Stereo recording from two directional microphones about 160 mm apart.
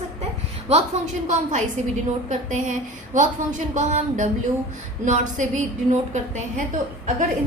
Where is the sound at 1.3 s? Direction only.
50° right (ahead or behind).